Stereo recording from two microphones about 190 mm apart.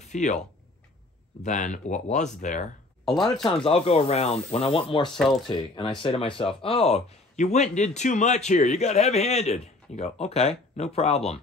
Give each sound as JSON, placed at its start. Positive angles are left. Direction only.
{"t": 0.0, "sound": "speech", "side_deg": 40}
{"t": 3.4, "sound": "speech", "side_deg": 25}